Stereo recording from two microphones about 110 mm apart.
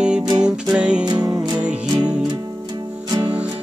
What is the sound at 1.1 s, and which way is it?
Music, 35° right (ahead or behind).